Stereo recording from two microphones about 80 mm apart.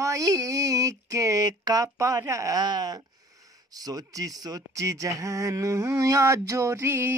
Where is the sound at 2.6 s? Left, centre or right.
Right.